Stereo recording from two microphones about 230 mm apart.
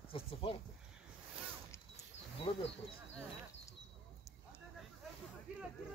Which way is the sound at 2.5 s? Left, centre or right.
Left.